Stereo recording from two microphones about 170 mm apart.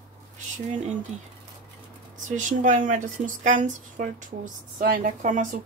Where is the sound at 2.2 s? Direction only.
50° right (ahead or behind).